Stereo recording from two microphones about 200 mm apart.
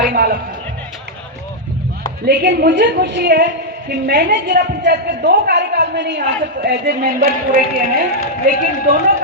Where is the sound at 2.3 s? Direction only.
60° right (ahead or behind).